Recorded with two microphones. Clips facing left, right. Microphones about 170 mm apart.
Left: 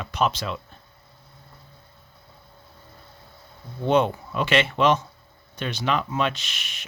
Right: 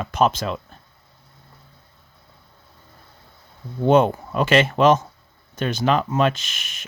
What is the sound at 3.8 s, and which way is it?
Speech, 45° right (ahead or behind).